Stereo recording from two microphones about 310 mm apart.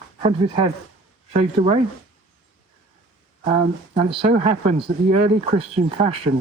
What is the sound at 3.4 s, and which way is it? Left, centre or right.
Speech, centre.